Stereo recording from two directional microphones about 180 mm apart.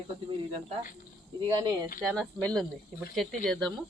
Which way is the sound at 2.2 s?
5° left (ahead or behind).